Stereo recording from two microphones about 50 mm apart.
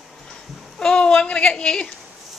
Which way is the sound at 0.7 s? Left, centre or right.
Centre.